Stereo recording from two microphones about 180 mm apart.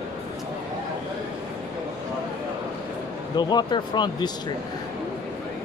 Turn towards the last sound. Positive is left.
turn(degrees=25)  # may be behind; listen again after turning